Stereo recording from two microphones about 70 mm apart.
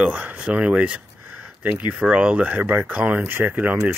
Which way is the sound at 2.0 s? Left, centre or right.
Right.